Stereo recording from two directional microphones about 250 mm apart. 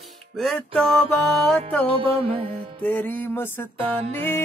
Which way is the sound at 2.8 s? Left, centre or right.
Centre.